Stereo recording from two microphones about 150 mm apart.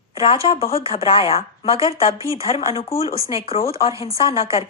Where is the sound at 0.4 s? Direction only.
35° left (ahead or behind).